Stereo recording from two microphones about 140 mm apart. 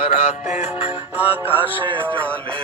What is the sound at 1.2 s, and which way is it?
Music, 15° right (ahead or behind).